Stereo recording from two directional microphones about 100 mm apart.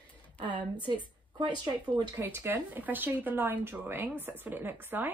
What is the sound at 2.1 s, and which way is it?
Speech, 25° right (ahead or behind).